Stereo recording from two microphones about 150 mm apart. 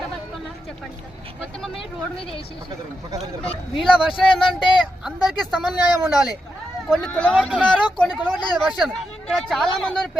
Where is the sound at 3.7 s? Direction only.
Centre (ahead or behind).